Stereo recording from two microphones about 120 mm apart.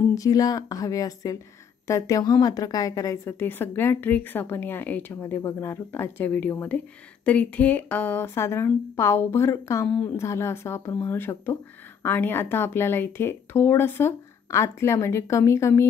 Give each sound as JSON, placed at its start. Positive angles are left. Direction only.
{"t": 0.1, "sound": "speech", "side_deg": 30}
{"t": 9.8, "sound": "speech", "side_deg": 10}
{"t": 10.1, "sound": "speech", "side_deg": 25}